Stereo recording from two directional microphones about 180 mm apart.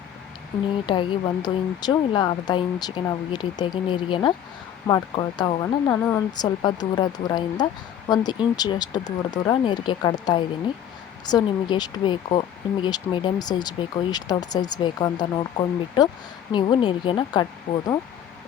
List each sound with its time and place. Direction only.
0.9 s speech: 25° left (ahead or behind)
5.9 s speech: 10° left (ahead or behind)
6.3 s speech: 25° left (ahead or behind)